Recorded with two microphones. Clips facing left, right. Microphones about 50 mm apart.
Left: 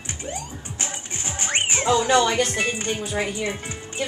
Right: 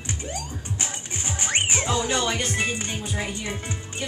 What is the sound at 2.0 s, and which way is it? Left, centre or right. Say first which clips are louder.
Speech: left 6 dB; left.